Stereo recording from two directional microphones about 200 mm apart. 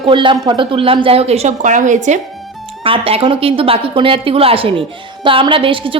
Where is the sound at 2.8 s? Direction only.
25° right (ahead or behind).